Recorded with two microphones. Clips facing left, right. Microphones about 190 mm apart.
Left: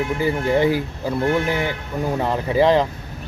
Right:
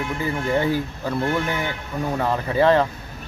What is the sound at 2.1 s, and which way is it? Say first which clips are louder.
Speech: left 2 dB; 20° left (ahead or behind).